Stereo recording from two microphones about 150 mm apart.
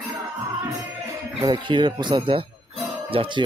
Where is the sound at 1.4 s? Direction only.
30° right (ahead or behind).